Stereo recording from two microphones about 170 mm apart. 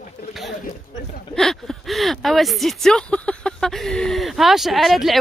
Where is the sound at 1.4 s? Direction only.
Centre (ahead or behind).